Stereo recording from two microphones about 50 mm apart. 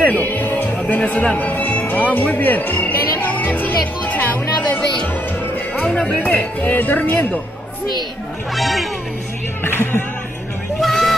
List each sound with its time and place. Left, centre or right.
0.0 s music: left
6.0 s speech: left
8.5 s speech: centre
9.6 s speech: left
10.8 s a sound: centre